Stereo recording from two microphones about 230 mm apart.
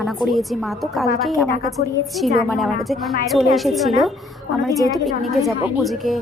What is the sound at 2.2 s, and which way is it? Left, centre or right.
A woman's voice, centre.